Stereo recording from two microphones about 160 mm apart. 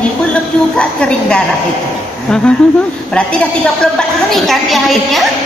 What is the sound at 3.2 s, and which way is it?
A woman's voice, 5° left (ahead or behind).